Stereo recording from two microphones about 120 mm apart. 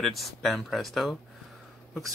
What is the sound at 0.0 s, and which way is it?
Speech, centre (ahead or behind).